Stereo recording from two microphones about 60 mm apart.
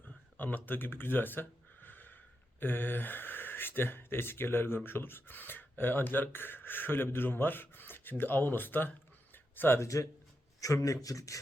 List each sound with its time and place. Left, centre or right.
0.3 s speech: left
9.3 s a sound: left
9.8 s a man's voice: left